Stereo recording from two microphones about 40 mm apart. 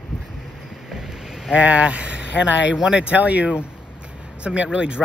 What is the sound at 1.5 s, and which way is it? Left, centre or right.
Speech, right.